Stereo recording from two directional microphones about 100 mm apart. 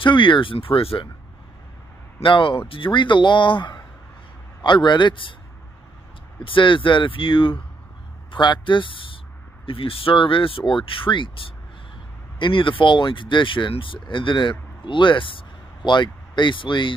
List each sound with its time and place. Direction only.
0.0 s speech: 55° left (ahead or behind)
2.2 s speech: 55° left (ahead or behind)
6.4 s speech: 55° left (ahead or behind)